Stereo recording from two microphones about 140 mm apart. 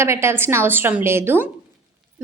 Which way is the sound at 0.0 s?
20° right (ahead or behind).